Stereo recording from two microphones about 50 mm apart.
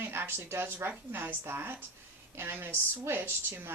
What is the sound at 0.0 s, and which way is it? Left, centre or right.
A woman's voice, right.